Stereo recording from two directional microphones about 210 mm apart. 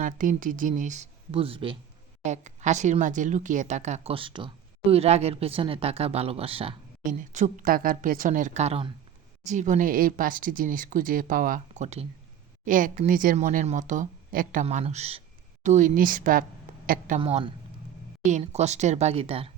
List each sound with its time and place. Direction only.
0.0 s a woman's voice: 40° right (ahead or behind)
7.0 s a woman's voice: 40° right (ahead or behind)
17.2 s a woman's voice: 25° right (ahead or behind)